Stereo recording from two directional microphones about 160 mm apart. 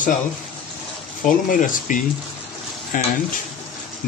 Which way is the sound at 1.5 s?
55° left (ahead or behind).